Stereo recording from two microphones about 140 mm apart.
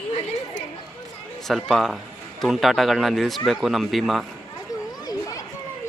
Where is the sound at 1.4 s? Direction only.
Centre (ahead or behind).